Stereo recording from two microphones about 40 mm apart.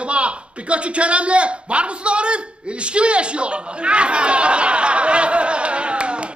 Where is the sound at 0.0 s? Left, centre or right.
Right.